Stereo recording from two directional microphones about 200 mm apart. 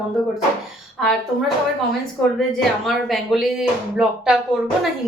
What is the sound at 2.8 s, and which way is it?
Speech, centre (ahead or behind).